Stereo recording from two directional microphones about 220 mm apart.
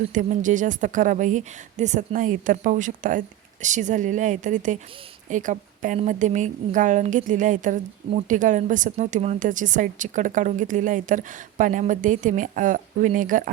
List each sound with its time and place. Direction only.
0.1 s a woman's voice: 35° right (ahead or behind)